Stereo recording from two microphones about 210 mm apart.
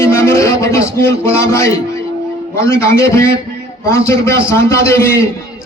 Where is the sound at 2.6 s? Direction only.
15° left (ahead or behind).